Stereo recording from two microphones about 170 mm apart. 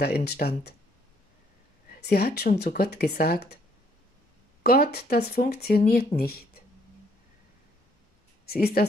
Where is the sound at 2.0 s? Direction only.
70° left (ahead or behind).